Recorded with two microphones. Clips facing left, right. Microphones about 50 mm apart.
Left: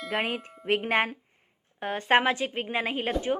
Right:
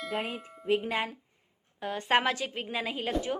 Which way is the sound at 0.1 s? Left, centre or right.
Left.